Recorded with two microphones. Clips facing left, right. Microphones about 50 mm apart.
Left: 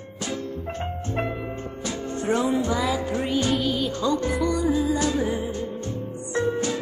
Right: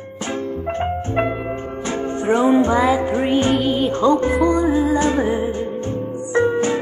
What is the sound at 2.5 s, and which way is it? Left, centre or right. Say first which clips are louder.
Music: right 9 dB; right.